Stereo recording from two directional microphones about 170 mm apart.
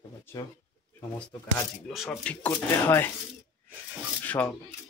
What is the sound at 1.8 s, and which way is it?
Speech, centre (ahead or behind).